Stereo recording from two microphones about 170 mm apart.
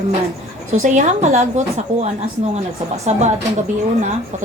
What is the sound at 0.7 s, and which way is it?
Speech, 45° right (ahead or behind).